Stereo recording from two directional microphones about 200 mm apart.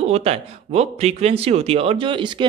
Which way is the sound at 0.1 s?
30° right (ahead or behind).